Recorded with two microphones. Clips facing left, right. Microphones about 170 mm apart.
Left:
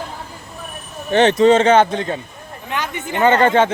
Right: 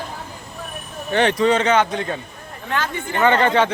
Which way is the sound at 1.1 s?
25° left (ahead or behind).